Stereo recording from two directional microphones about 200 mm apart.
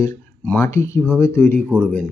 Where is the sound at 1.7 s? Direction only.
10° right (ahead or behind).